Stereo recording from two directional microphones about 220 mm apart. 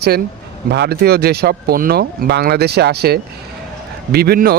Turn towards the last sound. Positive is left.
turn(degrees=-45)  # may be behind; listen again after turning